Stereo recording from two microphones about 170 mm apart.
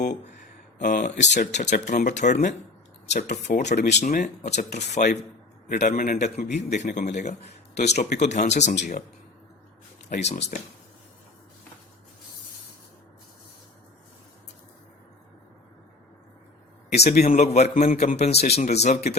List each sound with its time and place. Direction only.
0.8 s speech: 55° left (ahead or behind)
10.2 s speech: 45° left (ahead or behind)
17.0 s a man's voice: 40° left (ahead or behind)